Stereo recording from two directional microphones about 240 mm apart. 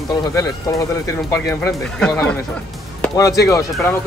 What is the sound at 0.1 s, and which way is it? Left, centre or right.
Speech, centre.